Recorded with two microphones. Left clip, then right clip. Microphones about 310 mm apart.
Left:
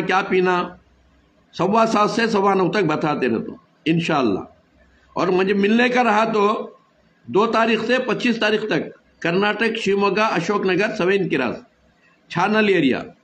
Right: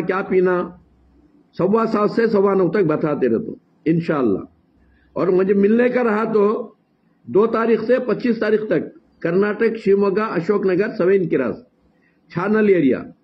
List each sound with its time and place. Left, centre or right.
0.1 s a man's voice: centre